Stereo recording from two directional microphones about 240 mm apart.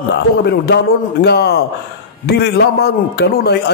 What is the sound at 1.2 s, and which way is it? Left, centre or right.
A man's voice, left.